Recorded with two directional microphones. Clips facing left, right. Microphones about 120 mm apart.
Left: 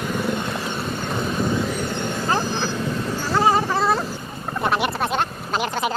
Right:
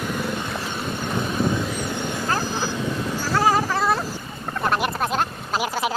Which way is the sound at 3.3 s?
Centre (ahead or behind).